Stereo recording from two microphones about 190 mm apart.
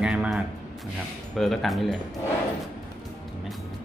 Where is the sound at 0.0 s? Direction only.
5° right (ahead or behind).